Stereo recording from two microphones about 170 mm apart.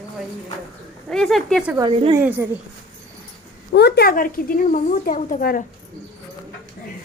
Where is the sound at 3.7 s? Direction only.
75° left (ahead or behind); by 5.6 s 55° left (ahead or behind).